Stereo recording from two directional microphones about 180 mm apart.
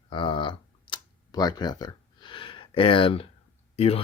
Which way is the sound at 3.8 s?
35° left (ahead or behind).